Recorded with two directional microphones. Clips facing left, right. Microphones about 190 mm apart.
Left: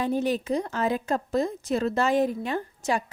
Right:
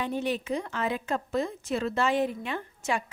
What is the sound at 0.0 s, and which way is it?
A woman's voice, 40° left (ahead or behind).